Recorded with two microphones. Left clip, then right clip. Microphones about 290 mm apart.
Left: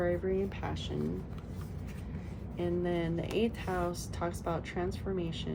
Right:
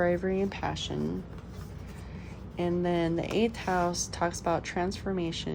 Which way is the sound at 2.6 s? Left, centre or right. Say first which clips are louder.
Right 5 dB; right.